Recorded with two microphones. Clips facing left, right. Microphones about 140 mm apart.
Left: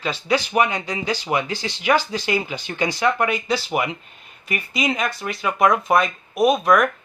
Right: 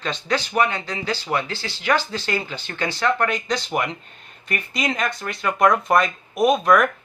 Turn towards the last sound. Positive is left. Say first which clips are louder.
# even
turn(degrees=0)  # may be behind; listen again after turning